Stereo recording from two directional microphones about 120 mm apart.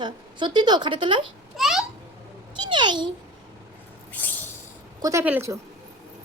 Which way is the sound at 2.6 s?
40° right (ahead or behind).